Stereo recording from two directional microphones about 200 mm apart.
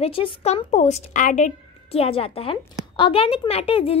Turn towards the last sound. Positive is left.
turn(degrees=30)  # may be behind; listen again after turning